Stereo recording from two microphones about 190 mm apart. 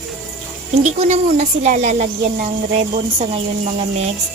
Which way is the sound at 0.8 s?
35° right (ahead or behind).